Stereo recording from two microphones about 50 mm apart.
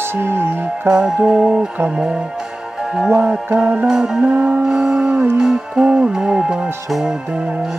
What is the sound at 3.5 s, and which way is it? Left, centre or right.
Music, right.